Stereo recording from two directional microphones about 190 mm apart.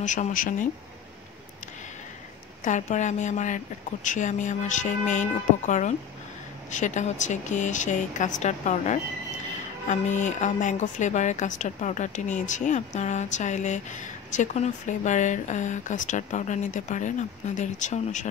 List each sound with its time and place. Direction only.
0.0 s speech: 40° left (ahead or behind)
2.6 s a woman's voice: 40° left (ahead or behind)